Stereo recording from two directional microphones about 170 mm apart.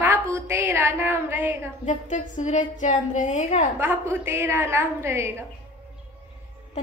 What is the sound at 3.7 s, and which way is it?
A woman's voice, 15° right (ahead or behind).